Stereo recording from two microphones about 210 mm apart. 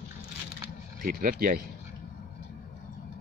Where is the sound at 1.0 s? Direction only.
40° right (ahead or behind).